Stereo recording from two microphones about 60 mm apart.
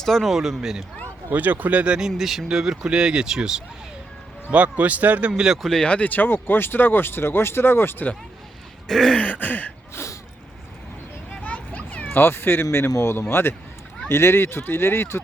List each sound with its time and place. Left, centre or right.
0.0 s speech: centre
1.3 s a man's voice: right
2.0 s speech: centre
4.5 s a man's voice: right
5.6 s speech: centre
5.9 s speech: left
8.9 s speech: centre
9.1 s throat clearing: left
9.9 s a sound: left
11.3 s children playing: left
12.1 s speech: left